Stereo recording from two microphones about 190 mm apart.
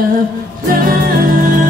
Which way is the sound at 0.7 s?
45° right (ahead or behind).